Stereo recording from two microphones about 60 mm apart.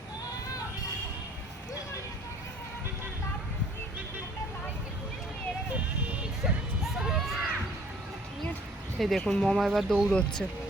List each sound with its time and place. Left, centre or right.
6.4 s music: centre
9.0 s speech: centre
10.1 s speech: centre